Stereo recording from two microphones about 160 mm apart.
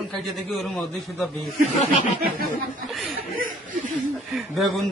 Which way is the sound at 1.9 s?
55° right (ahead or behind).